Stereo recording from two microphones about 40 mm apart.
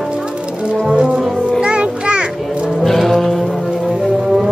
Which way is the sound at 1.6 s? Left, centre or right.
Right.